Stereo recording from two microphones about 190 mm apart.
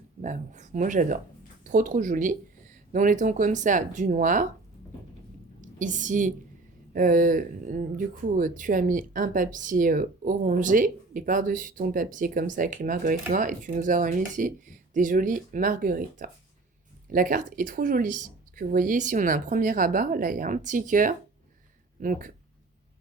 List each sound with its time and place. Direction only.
0.2 s speech: 40° right (ahead or behind)
5.5 s a woman's voice: 40° right (ahead or behind)